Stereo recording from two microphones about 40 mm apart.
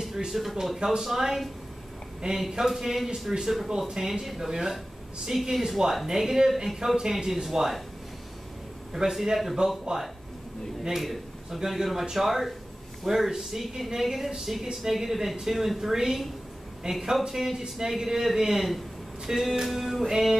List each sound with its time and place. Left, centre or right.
0.3 s speech: centre
2.5 s speech: centre
9.1 s speech: centre
9.9 s a man's voice: centre